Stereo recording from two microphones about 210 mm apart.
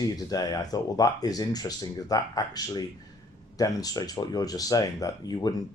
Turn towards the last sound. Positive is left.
turn(degrees=20)  # may be behind; listen again after turning